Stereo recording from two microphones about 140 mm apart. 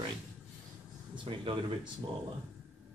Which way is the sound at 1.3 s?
40° right (ahead or behind).